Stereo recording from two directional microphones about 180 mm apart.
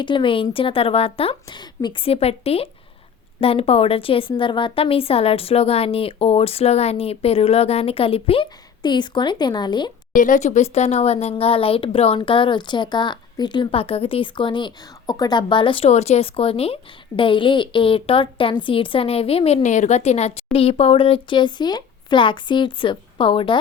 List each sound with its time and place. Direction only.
0.0 s a woman's voice: 25° left (ahead or behind)
10.1 s speech: 45° left (ahead or behind); by 23.6 s 30° left (ahead or behind)